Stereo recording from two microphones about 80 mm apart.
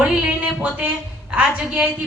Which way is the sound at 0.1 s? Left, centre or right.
Centre.